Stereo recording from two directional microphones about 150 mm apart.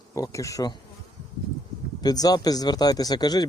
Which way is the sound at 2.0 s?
25° left (ahead or behind).